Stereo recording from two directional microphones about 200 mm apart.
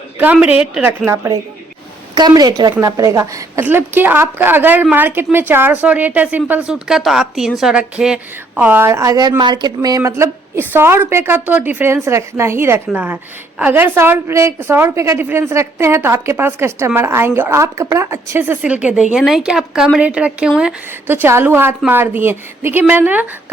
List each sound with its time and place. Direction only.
0.2 s a woman's voice: 10° right (ahead or behind)